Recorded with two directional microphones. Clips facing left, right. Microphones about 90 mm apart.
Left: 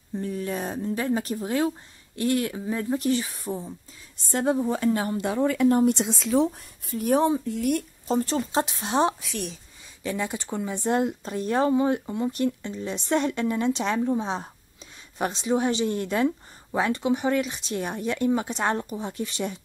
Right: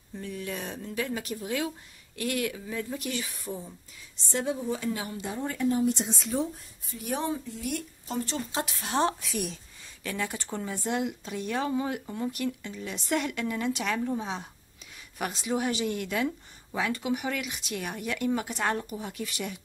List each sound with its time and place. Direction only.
0.2 s speech: 35° left (ahead or behind)
4.3 s speech: 50° left (ahead or behind)
5.3 s speech: 90° left
5.8 s a woman's voice: 65° left (ahead or behind)
7.0 s speech: 45° left (ahead or behind)
7.4 s speech: 55° left (ahead or behind)
8.1 s speech: 35° left (ahead or behind)
8.6 s a woman's voice: 25° left (ahead or behind)
9.2 s speech: centre (ahead or behind)
10.0 s a woman's voice: 20° left (ahead or behind)
10.9 s a woman's voice: 40° left (ahead or behind)